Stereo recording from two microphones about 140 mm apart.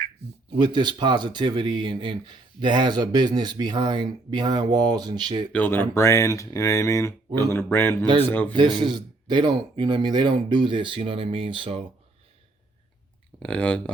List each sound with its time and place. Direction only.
0.6 s speech: 30° right (ahead or behind)
5.5 s speech: 10° left (ahead or behind)
8.5 s speech: 35° right (ahead or behind)
13.4 s speech: 10° left (ahead or behind)